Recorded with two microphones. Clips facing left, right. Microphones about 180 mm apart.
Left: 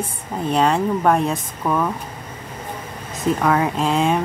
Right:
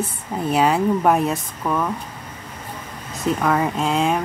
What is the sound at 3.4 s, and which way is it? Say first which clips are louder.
Speech: left 1 dB; centre (ahead or behind).